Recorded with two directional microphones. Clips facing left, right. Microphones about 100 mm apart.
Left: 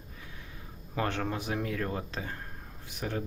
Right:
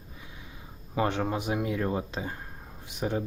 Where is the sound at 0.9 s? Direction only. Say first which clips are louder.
Right 4 dB; 15° right (ahead or behind).